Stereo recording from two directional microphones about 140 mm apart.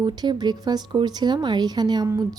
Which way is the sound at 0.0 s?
30° right (ahead or behind).